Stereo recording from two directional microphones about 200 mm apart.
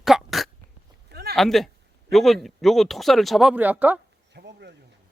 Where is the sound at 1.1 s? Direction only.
55° right (ahead or behind).